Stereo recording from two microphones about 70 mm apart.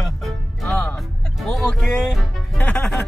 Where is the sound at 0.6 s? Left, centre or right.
Left.